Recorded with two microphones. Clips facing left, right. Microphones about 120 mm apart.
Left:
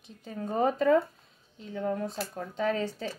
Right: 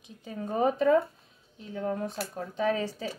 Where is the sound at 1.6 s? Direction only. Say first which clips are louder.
Even; 5° right (ahead or behind).